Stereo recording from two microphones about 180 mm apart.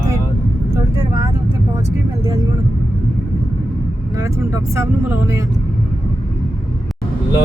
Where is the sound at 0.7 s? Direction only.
20° right (ahead or behind).